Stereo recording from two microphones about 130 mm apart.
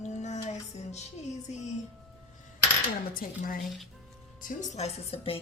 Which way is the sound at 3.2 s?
90° left.